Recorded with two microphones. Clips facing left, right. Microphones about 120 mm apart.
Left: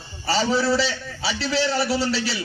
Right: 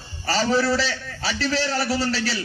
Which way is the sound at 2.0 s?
40° right (ahead or behind).